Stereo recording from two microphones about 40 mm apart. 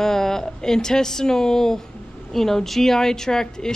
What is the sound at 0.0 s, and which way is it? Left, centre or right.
Speech, centre.